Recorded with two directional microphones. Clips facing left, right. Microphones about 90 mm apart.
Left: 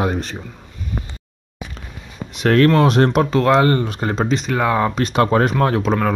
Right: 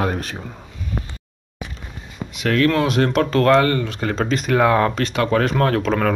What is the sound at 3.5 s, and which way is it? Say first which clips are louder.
Speech: left 2 dB; 25° left (ahead or behind).